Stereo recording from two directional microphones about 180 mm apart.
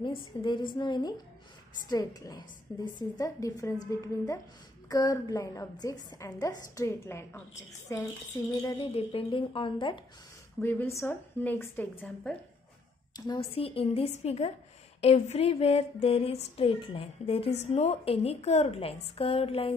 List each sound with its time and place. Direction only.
0.0 s a woman's voice: 25° left (ahead or behind)
8.7 s a woman's voice: 30° left (ahead or behind)
10.6 s a woman's voice: 10° left (ahead or behind)
13.1 s a woman's voice: 30° left (ahead or behind)